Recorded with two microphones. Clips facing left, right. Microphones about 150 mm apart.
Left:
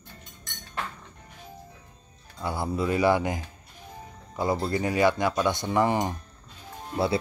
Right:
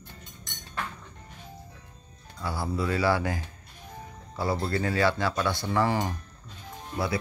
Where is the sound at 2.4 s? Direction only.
20° left (ahead or behind).